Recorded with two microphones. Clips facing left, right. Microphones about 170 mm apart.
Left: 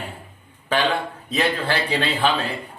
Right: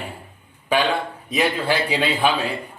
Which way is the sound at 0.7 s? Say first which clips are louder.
Right 1 dB; 10° right (ahead or behind).